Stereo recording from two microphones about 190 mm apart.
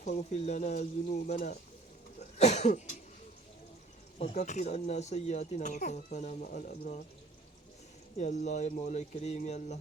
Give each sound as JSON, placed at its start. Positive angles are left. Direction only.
{"t": 0.0, "sound": "speech", "side_deg": 35}
{"t": 2.4, "sound": "cough", "side_deg": 35}
{"t": 4.2, "sound": "speech", "side_deg": 35}
{"t": 8.2, "sound": "speech", "side_deg": 40}